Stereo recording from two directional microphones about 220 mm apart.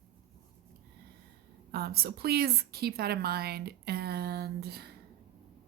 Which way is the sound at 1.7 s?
45° right (ahead or behind).